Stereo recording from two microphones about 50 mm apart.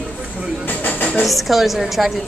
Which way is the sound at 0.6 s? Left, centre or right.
Left.